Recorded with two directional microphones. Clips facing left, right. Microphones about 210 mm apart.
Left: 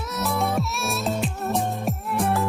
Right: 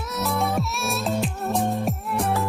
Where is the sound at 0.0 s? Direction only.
Centre (ahead or behind).